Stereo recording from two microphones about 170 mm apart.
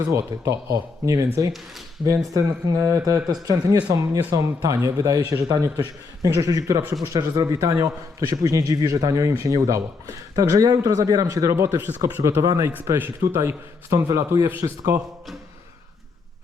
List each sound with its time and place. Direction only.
0.1 s a man's voice: 15° right (ahead or behind)